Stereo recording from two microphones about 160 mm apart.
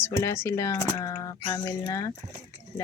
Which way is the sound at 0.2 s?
15° left (ahead or behind).